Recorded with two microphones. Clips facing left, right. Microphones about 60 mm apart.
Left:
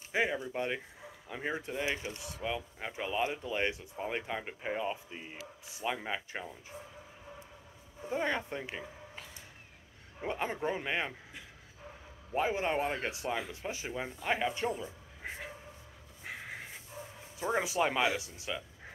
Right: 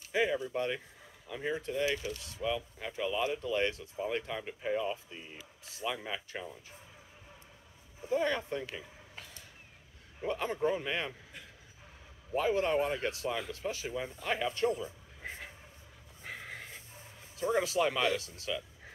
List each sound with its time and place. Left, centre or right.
0.1 s speech: left
8.1 s speech: left
10.2 s speech: left
12.4 s a man's voice: left
16.3 s a sound: centre
17.4 s speech: centre